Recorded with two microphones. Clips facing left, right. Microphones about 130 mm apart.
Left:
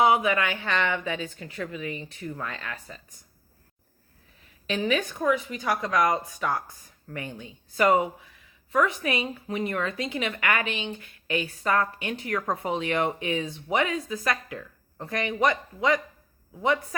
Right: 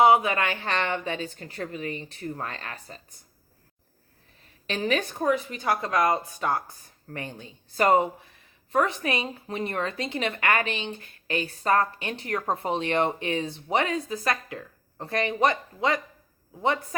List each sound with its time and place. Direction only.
0.0 s a woman's voice: 30° right (ahead or behind)
4.6 s a woman's voice: 35° right (ahead or behind)